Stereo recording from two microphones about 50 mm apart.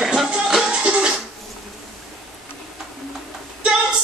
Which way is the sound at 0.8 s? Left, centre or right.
Right.